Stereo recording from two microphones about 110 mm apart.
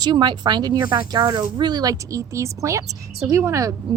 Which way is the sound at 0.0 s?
40° right (ahead or behind).